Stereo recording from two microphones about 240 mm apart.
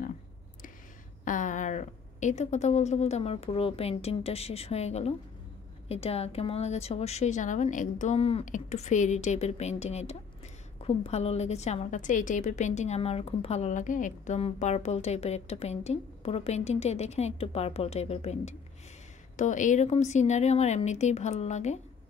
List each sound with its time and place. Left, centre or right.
1.2 s a woman's voice: left